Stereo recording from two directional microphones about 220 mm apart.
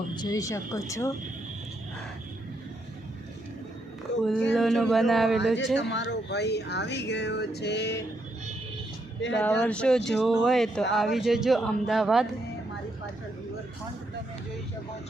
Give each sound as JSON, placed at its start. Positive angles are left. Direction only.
{"t": 0.1, "sound": "speech", "side_deg": 20}
{"t": 4.2, "sound": "speech", "side_deg": 0}
{"t": 5.7, "sound": "speech", "side_deg": 55}
{"t": 9.4, "sound": "speech", "side_deg": 5}